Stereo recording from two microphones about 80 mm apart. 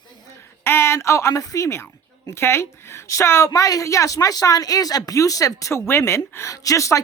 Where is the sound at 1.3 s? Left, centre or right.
Left.